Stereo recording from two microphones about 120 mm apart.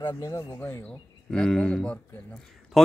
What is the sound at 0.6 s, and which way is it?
Speech, 20° left (ahead or behind).